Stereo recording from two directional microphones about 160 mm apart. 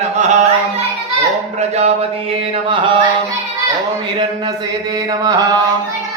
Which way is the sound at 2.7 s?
30° right (ahead or behind).